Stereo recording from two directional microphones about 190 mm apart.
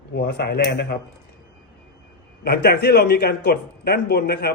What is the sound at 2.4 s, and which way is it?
A man's voice, 55° left (ahead or behind).